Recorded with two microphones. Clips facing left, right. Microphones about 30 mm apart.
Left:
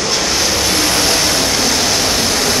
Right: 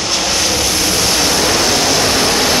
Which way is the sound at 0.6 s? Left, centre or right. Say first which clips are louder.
Left 1 dB; centre.